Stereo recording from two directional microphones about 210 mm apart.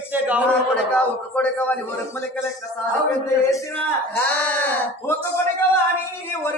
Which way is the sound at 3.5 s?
10° left (ahead or behind).